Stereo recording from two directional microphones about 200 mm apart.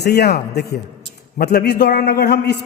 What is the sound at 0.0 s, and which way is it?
A man's voice, 55° left (ahead or behind).